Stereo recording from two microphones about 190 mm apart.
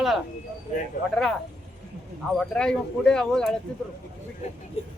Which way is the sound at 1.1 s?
5° left (ahead or behind).